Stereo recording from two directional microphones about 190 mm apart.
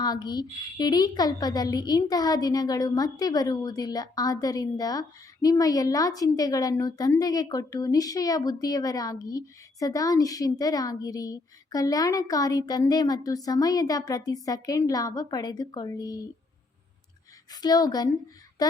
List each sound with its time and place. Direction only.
0.0 s a woman's voice: 20° left (ahead or behind)
17.5 s a woman's voice: 20° left (ahead or behind)